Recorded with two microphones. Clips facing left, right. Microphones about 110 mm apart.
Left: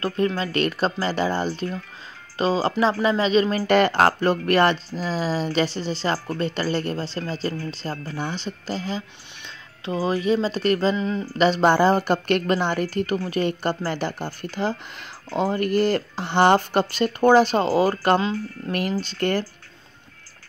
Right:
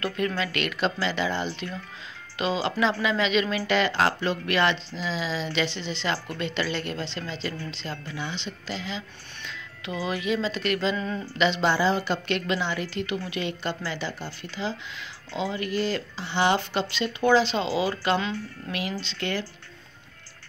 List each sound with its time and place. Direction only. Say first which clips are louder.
0.0 s speech: left 4 dB; 35° left (ahead or behind)
11.0 s a sound: left 5 dB; 20° left (ahead or behind)
11.3 s speech: left 6 dB; 40° left (ahead or behind)